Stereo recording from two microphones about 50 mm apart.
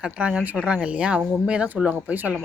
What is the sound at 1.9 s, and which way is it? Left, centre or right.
Speech, right.